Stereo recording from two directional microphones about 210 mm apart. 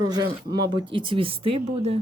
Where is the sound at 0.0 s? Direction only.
20° right (ahead or behind).